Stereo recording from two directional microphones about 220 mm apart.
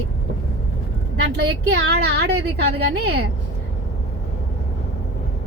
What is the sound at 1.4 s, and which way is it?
A woman's voice, 50° right (ahead or behind).